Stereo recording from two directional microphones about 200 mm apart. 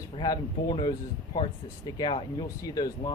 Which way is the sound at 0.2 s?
20° left (ahead or behind).